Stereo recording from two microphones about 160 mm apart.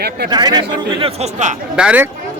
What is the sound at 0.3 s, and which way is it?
Speech, 25° right (ahead or behind).